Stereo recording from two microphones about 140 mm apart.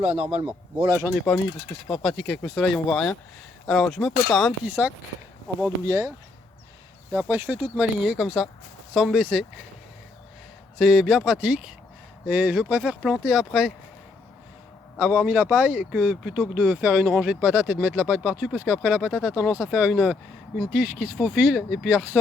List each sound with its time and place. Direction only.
0.0 s a man's voice: 45° right (ahead or behind)
0.8 s speech: 25° right (ahead or behind)
1.0 s speech: centre (ahead or behind)
4.6 s speech: 10° right (ahead or behind)
5.8 s speech: 25° right (ahead or behind); by 9.5 s 5° right (ahead or behind)
10.8 s speech: centre (ahead or behind)
14.9 s speech: 10° right (ahead or behind)